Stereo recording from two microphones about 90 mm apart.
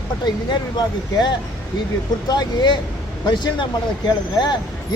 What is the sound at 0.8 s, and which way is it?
Speech, 50° left (ahead or behind).